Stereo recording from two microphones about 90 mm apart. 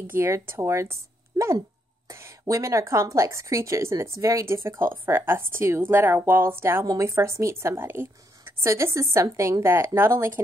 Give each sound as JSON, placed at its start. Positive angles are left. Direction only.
{"t": 0.0, "sound": "a woman's voice", "side_deg": -25}
{"t": 1.3, "sound": "dog", "side_deg": -50}
{"t": 2.0, "sound": "a woman's voice", "side_deg": -35}